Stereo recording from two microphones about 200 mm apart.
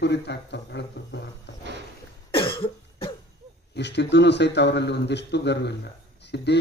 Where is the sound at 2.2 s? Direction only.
25° left (ahead or behind).